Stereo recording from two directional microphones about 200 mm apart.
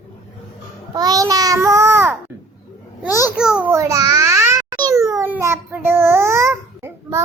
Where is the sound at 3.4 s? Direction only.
5° right (ahead or behind).